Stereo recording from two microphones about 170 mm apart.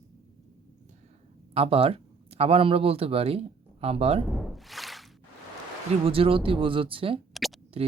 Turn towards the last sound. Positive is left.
turn(degrees=0)  # may be behind; listen again after turning